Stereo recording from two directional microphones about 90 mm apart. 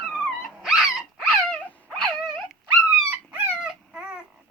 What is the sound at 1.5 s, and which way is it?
Dog, 10° left (ahead or behind).